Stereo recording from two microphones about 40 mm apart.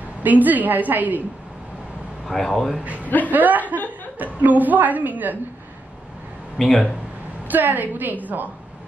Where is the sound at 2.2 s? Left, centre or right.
Centre.